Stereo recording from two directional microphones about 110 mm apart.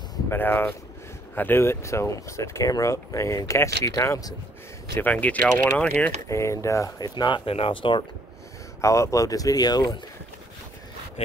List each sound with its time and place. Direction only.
0.3 s speech: 20° left (ahead or behind)
4.9 s speech: 15° left (ahead or behind)
6.2 s speech: 30° left (ahead or behind); by 8.0 s 50° left (ahead or behind)
8.8 s speech: 30° left (ahead or behind)